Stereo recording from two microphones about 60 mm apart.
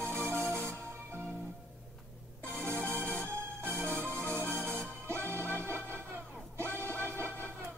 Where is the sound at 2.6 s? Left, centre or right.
Right.